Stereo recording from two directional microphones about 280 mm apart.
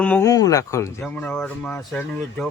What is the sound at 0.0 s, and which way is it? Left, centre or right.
Speech, centre.